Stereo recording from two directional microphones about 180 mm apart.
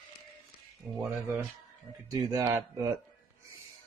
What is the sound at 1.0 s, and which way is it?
Speech, centre (ahead or behind).